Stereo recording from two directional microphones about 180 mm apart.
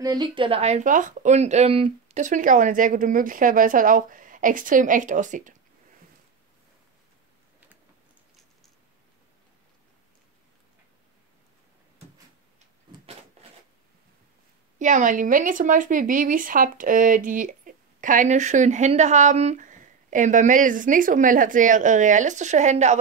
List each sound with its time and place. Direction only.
0.0 s speech: 20° right (ahead or behind); by 5.6 s 45° right (ahead or behind)
13.4 s a sound: 35° right (ahead or behind)
14.8 s speech: 45° right (ahead or behind)